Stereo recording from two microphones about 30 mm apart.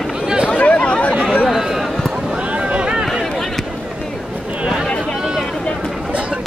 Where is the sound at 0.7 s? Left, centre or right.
Left.